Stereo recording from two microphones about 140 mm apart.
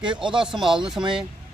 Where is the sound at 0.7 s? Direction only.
5° right (ahead or behind).